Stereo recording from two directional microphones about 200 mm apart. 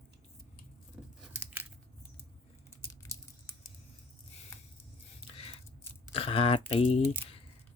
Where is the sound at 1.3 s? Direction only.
10° right (ahead or behind).